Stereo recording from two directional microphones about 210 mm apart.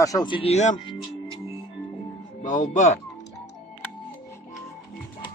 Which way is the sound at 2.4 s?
35° left (ahead or behind).